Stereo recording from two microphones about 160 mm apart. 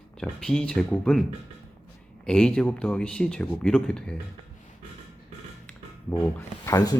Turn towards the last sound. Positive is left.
turn(degrees=20)  # may be behind; listen again after turning